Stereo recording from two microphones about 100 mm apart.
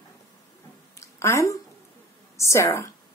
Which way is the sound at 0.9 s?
30° left (ahead or behind).